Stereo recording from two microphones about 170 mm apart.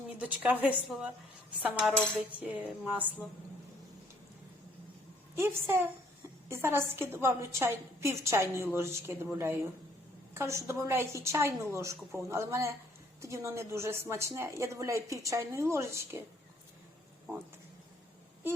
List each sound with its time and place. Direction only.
0.6 s a woman's voice: 5° right (ahead or behind)
5.3 s a woman's voice: 15° right (ahead or behind)